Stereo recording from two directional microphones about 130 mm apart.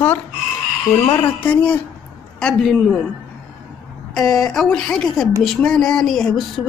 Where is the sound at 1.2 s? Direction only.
10° left (ahead or behind).